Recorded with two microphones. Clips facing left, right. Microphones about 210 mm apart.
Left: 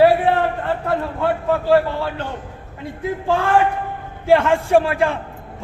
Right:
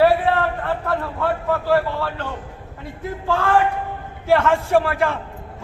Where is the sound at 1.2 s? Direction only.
25° left (ahead or behind).